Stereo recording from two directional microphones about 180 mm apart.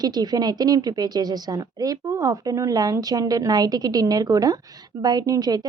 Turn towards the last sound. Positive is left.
turn(degrees=-20)  # may be behind; listen again after turning